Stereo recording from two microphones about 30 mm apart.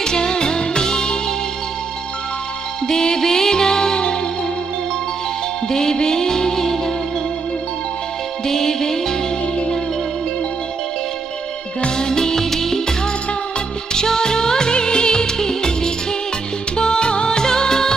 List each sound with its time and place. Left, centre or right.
0.0 s music: left
2.9 s music: left
5.7 s music: centre
8.5 s music: centre
12.0 s music: left
13.9 s music: left